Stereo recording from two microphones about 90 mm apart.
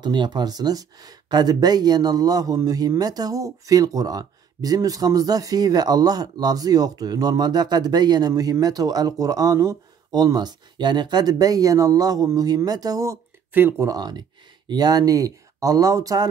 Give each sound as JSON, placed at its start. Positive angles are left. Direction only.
{"t": 0.0, "sound": "speech", "side_deg": -55}
{"t": 13.5, "sound": "speech", "side_deg": -25}
{"t": 13.8, "sound": "speech", "side_deg": -50}